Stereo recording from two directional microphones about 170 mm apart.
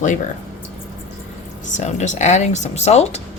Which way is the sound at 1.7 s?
45° left (ahead or behind).